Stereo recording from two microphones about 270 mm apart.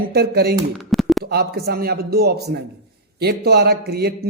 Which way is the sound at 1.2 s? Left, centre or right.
Right.